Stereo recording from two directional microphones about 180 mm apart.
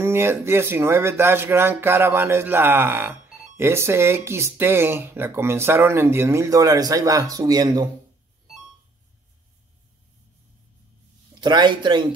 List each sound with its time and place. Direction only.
0.0 s speech: 15° right (ahead or behind)
11.4 s a man's voice: 25° right (ahead or behind)